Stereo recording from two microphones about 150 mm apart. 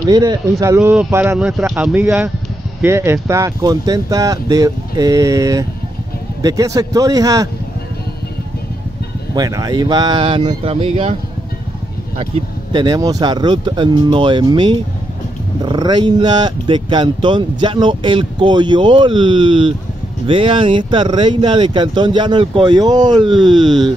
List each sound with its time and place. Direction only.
0.1 s speech: 25° right (ahead or behind)
9.3 s speech: 25° right (ahead or behind); by 11.1 s 40° right (ahead or behind)
12.7 s speech: 30° right (ahead or behind)